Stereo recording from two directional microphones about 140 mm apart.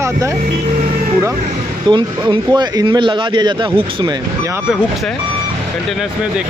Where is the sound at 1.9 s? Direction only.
35° right (ahead or behind).